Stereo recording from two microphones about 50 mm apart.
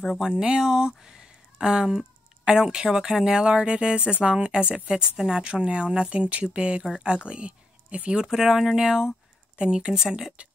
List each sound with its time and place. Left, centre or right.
0.4 s speech: centre
6.8 s speech: centre
8.3 s speech: centre
10.0 s speech: centre